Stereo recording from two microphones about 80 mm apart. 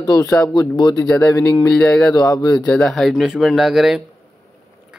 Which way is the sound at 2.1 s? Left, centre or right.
Left.